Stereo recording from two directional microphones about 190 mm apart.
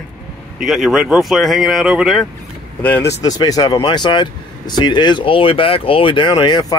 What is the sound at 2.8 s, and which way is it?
Speech, 10° left (ahead or behind).